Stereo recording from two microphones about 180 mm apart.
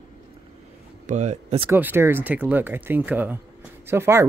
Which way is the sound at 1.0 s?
40° right (ahead or behind).